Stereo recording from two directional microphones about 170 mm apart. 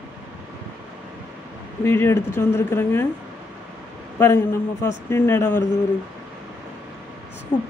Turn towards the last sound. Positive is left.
turn(degrees=5)  # may be behind; listen again after turning